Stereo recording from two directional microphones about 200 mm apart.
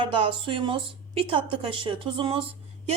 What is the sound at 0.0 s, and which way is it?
A woman's voice, 25° right (ahead or behind).